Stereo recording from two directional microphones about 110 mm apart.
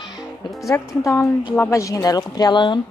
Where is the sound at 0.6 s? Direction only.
30° left (ahead or behind).